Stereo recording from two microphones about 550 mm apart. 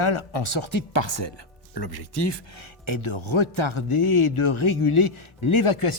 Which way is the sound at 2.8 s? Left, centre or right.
Left.